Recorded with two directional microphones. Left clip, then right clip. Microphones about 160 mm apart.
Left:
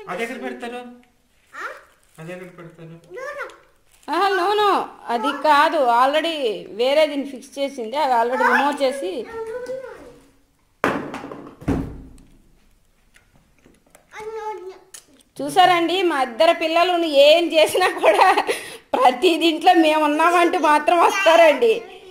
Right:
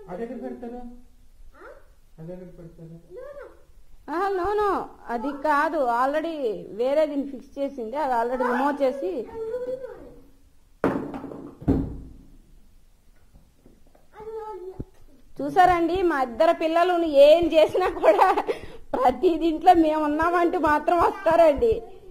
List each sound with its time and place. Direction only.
0.0 s speech: 40° left (ahead or behind)
4.0 s a woman's voice: 5° left (ahead or behind)
15.3 s a woman's voice: 5° left (ahead or behind)